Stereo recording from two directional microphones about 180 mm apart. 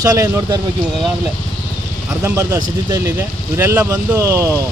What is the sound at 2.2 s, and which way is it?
Speech, 15° right (ahead or behind).